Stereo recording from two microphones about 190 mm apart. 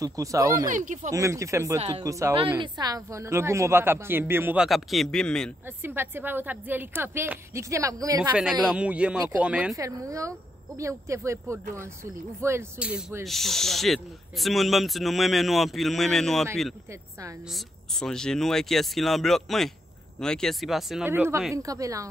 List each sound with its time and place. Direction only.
0.0 s speech: 15° right (ahead or behind)
0.7 s speech: 40° right (ahead or behind)
1.1 s speech: 15° right (ahead or behind)
2.3 s speech: 25° right (ahead or behind); by 5.5 s 5° left (ahead or behind)
5.8 s speech: 10° right (ahead or behind)
8.2 s speech: 5° right (ahead or behind)
9.8 s speech: 15° right (ahead or behind); by 16.4 s centre (ahead or behind)
17.5 s speech: centre (ahead or behind)
21.1 s speech: 10° right (ahead or behind)